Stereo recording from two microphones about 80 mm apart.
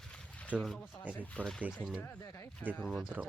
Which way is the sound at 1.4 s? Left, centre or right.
Left.